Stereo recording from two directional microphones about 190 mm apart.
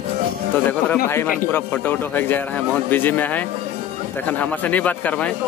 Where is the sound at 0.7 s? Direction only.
10° left (ahead or behind).